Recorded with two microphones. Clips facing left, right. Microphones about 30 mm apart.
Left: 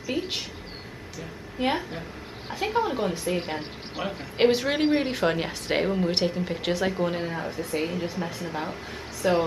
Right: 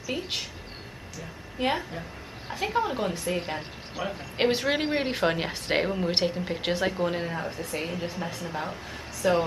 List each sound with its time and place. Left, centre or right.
0.1 s speech: centre
1.6 s speech: centre
1.9 s a sound: left
2.5 s speech: centre
3.9 s speech: centre
4.5 s a woman's voice: centre